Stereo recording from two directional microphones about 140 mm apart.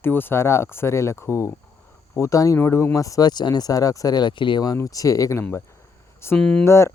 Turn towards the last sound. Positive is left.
turn(degrees=20)  # may be behind; listen again after turning